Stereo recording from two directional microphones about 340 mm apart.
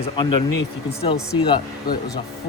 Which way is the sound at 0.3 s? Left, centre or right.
Left.